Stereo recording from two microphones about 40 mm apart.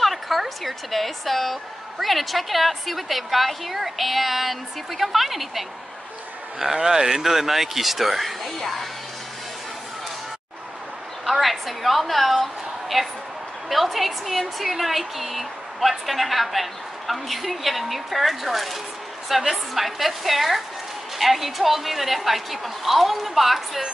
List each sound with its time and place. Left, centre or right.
0.0 s a woman's voice: centre
11.2 s a woman's voice: centre